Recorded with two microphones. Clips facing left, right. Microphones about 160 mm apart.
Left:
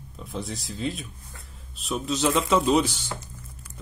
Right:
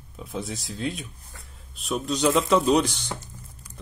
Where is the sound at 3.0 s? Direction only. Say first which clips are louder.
Right 1 dB; 15° right (ahead or behind).